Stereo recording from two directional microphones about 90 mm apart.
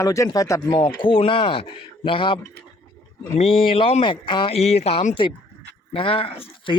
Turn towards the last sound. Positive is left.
turn(degrees=90)